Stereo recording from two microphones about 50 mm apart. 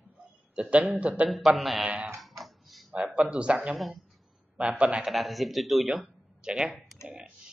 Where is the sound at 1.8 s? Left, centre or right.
Right.